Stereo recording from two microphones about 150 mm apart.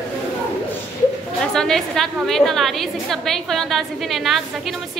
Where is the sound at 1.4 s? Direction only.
5° left (ahead or behind).